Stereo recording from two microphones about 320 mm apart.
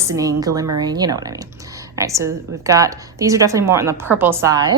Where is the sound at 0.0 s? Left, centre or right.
Centre.